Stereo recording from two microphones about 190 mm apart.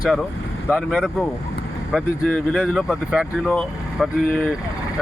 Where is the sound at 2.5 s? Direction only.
Centre (ahead or behind).